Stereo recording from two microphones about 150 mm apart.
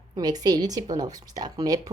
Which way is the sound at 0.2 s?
25° right (ahead or behind).